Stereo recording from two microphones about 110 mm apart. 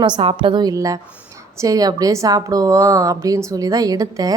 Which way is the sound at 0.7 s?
30° right (ahead or behind).